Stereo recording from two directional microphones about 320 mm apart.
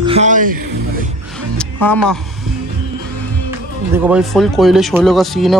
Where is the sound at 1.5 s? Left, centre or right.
Centre.